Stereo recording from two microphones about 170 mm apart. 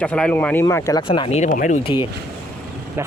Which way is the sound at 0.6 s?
20° left (ahead or behind).